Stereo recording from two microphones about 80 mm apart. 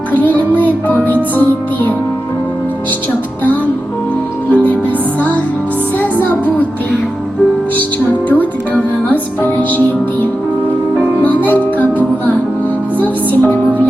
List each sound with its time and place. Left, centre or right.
0.1 s music: left
4.5 s music: centre
6.0 s music: left
8.3 s music: left
11.4 s music: left